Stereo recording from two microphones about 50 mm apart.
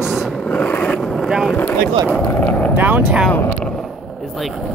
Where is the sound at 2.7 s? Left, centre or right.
Right.